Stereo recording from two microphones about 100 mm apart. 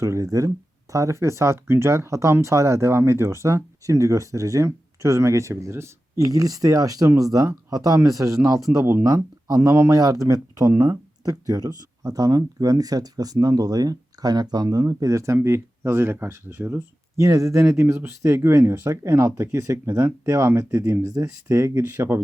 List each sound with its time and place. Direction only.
0.0 s speech: 35° right (ahead or behind)
17.2 s speech: 30° right (ahead or behind)